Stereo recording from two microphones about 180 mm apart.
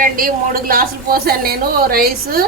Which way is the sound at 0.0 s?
50° right (ahead or behind).